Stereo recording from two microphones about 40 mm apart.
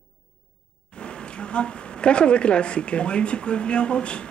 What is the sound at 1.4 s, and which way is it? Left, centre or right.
Speech, left.